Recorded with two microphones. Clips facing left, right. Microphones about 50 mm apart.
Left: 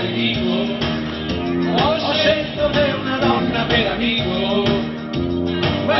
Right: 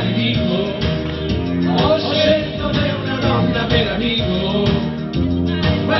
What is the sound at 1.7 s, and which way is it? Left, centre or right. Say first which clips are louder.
Music: right 3 dB; centre.